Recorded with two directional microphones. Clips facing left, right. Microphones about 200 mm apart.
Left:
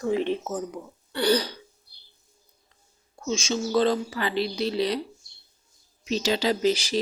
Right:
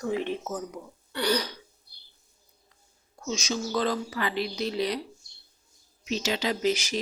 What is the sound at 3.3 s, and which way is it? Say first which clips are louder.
Speech: left 4 dB; 25° left (ahead or behind).